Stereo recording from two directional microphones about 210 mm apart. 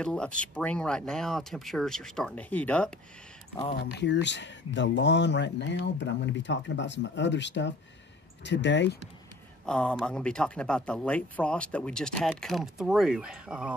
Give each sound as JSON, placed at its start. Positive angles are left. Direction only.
{"t": 0.0, "sound": "speech", "side_deg": 5}
{"t": 3.8, "sound": "speech", "side_deg": 55}
{"t": 9.7, "sound": "speech", "side_deg": 5}